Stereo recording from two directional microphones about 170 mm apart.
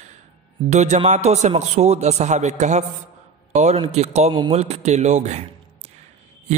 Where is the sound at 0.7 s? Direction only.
40° right (ahead or behind).